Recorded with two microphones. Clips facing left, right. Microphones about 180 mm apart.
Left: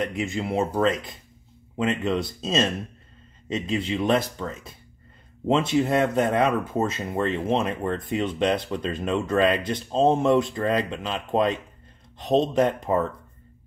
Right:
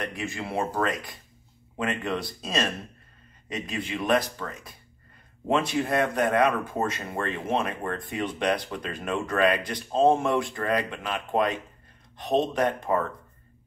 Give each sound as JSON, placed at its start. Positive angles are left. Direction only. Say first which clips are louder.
{"t": 0.0, "sound": "speech", "louder": "left 5 dB", "side_deg": 20}